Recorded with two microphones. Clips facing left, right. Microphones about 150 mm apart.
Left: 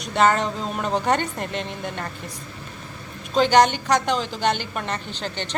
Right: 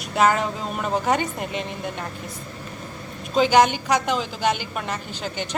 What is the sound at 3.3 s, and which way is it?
Speech, 5° right (ahead or behind).